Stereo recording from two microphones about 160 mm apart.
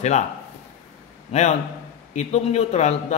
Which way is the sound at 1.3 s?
45° left (ahead or behind).